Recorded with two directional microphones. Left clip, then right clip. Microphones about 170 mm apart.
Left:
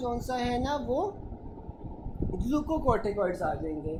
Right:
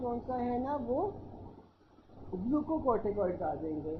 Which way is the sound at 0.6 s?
30° left (ahead or behind).